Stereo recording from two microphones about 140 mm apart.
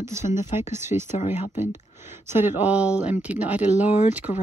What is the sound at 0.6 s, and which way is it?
Speech, 20° right (ahead or behind).